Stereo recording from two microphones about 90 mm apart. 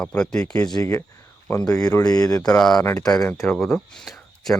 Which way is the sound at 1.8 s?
40° left (ahead or behind).